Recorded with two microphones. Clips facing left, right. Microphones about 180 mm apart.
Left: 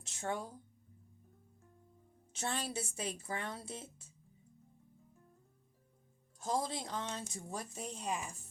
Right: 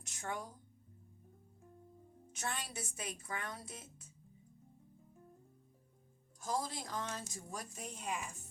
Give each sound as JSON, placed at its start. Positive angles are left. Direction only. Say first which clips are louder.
{"t": 0.0, "sound": "a sound", "louder": "left 4 dB", "side_deg": 25}
{"t": 2.3, "sound": "speech", "louder": "left 4 dB", "side_deg": 30}
{"t": 6.4, "sound": "speech", "louder": "left 3 dB", "side_deg": 25}